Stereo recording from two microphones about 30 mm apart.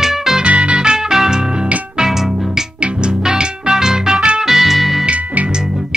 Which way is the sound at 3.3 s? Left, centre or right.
Right.